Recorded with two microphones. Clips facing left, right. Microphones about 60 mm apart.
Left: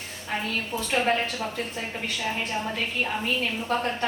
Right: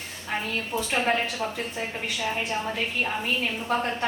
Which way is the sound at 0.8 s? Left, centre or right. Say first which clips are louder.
Even; centre.